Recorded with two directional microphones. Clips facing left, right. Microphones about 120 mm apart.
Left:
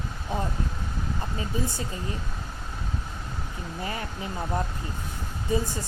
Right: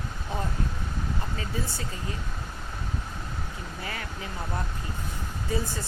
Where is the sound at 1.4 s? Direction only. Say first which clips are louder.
Left 3 dB; 15° left (ahead or behind).